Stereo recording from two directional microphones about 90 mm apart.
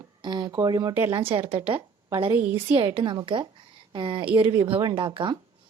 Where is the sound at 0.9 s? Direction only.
25° right (ahead or behind).